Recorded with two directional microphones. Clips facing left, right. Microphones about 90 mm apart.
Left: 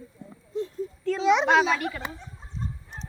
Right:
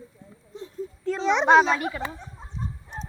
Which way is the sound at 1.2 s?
5° left (ahead or behind).